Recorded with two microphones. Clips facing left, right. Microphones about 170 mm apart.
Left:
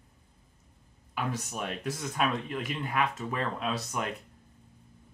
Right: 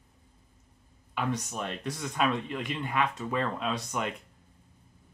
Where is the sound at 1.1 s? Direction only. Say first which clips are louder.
Right 2 dB; 5° left (ahead or behind).